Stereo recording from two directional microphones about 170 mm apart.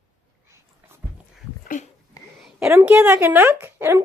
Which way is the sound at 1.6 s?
50° left (ahead or behind).